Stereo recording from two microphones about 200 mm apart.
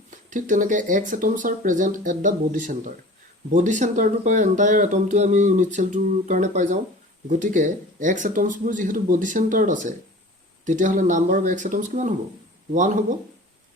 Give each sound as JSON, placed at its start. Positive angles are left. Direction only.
{"t": 0.1, "sound": "speech", "side_deg": -40}